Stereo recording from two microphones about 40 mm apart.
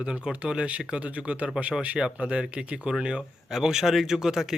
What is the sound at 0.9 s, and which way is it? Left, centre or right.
Speech, right.